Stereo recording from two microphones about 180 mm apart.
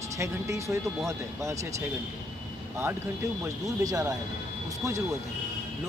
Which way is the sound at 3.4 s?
15° right (ahead or behind).